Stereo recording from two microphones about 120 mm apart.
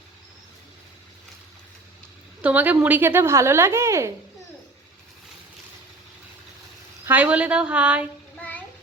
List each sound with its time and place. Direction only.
2.4 s a woman's voice: 10° right (ahead or behind)
7.0 s a woman's voice: 15° right (ahead or behind)
8.4 s music: 15° left (ahead or behind)